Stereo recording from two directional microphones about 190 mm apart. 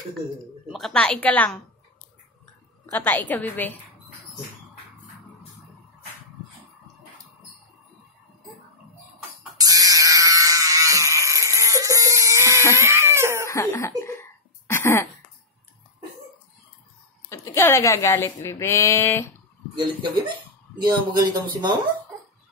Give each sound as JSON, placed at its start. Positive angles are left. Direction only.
{"t": 0.7, "sound": "a woman's voice", "side_deg": 0}
{"t": 2.9, "sound": "speech", "side_deg": 10}
{"t": 9.6, "sound": "a sound", "side_deg": -20}
{"t": 12.7, "sound": "cat", "side_deg": -15}
{"t": 13.5, "sound": "laughter", "side_deg": 15}
{"t": 14.7, "sound": "cough", "side_deg": 15}
{"t": 17.3, "sound": "speech", "side_deg": 15}
{"t": 19.7, "sound": "speech", "side_deg": -25}